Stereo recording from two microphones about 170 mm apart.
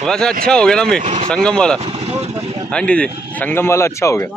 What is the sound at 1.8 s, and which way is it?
Speech, 35° right (ahead or behind).